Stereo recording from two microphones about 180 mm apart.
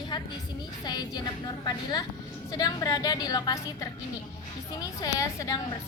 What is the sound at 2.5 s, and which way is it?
A woman's voice, 20° left (ahead or behind).